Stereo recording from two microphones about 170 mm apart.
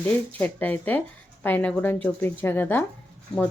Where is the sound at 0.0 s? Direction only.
10° left (ahead or behind).